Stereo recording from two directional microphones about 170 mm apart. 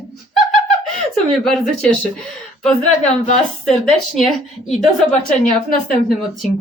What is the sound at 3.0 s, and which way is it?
Speech, 40° left (ahead or behind).